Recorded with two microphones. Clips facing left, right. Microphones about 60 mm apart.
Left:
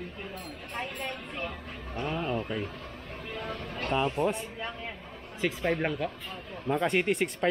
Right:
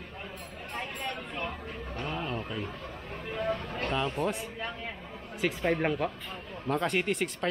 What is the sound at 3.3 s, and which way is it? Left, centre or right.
Speech, centre.